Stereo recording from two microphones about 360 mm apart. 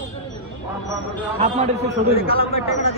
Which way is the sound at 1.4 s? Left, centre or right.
Centre.